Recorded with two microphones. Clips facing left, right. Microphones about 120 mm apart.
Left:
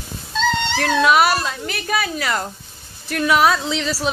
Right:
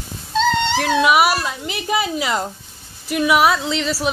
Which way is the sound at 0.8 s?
5° right (ahead or behind).